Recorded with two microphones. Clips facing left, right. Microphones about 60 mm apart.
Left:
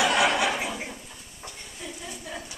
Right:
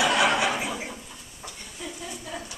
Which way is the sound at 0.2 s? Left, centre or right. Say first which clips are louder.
Right 1 dB; right.